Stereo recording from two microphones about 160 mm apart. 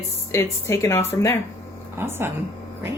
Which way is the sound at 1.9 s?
15° right (ahead or behind).